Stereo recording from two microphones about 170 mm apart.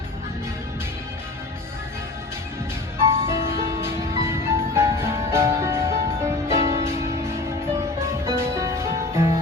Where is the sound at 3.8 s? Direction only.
15° right (ahead or behind).